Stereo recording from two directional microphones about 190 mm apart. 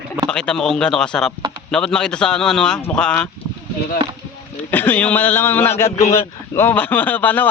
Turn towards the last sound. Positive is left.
turn(degrees=10)  # may be behind; listen again after turning